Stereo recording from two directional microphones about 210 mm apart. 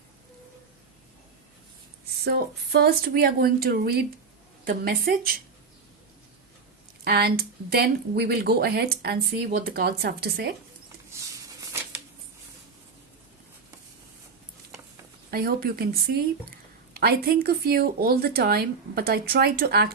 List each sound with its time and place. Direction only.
2.8 s speech: 45° right (ahead or behind)
7.0 s speech: 50° right (ahead or behind)
11.1 s a sound: 10° right (ahead or behind)
15.3 s speech: 45° right (ahead or behind)